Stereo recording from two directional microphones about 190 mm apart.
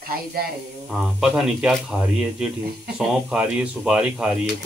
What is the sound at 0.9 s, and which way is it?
Speech, centre (ahead or behind).